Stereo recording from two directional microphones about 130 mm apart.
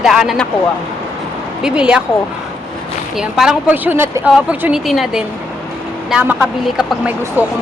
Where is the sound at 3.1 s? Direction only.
5° right (ahead or behind).